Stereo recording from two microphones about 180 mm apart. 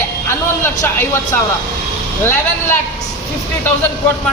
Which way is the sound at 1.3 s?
15° left (ahead or behind).